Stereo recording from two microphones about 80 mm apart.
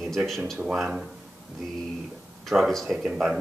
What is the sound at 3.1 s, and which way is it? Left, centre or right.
Speech, centre.